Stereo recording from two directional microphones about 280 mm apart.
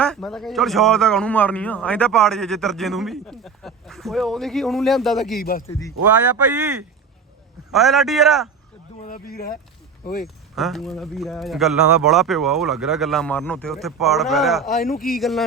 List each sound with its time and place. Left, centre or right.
0.0 s a man's voice: centre
5.4 s speech: left
6.6 s a man's voice: centre
9.0 s speech: left
10.5 s a man's voice: centre
14.8 s speech: left
15.2 s a man's voice: centre